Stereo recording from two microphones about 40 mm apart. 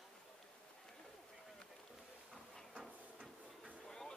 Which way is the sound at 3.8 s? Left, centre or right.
Centre.